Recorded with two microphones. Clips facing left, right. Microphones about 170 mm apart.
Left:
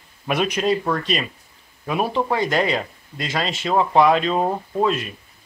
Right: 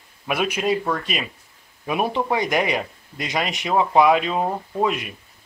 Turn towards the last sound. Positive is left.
turn(degrees=-10)  # may be behind; listen again after turning